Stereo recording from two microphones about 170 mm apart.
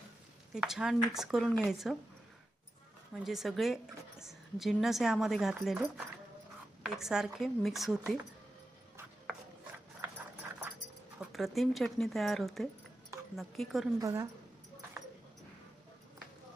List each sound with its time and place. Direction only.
0.5 s a woman's voice: 5° right (ahead or behind)
3.2 s a woman's voice: centre (ahead or behind)
11.3 s a woman's voice: centre (ahead or behind)
14.0 s speech: 15° right (ahead or behind)